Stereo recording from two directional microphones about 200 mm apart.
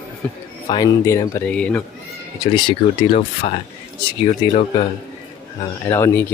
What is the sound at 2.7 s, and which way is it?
Speech, 30° left (ahead or behind).